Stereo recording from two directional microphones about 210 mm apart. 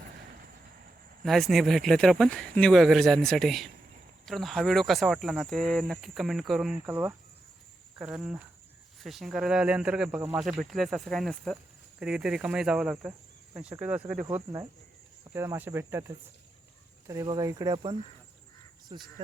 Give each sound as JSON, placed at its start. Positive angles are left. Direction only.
{"t": 1.2, "sound": "speech", "side_deg": 0}